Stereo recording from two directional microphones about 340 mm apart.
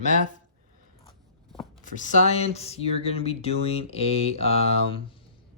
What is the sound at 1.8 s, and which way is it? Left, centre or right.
Speech, left.